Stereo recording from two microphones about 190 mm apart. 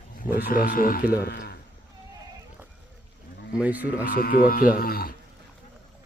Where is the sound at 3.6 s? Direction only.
10° right (ahead or behind).